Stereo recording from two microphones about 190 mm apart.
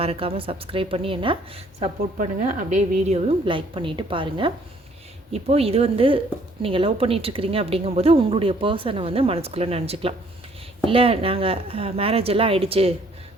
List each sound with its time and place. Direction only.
0.0 s a woman's voice: 30° right (ahead or behind)
2.1 s a woman's voice: 40° right (ahead or behind)